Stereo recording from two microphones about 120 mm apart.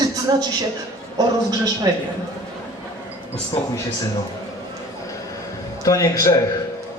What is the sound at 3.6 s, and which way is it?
Speech, 10° left (ahead or behind).